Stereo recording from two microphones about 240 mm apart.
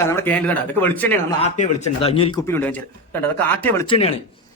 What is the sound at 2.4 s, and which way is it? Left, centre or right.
Speech, centre.